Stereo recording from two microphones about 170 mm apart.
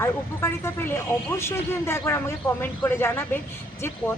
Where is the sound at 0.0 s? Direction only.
15° left (ahead or behind).